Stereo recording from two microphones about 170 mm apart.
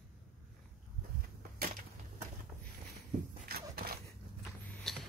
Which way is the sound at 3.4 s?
65° right (ahead or behind).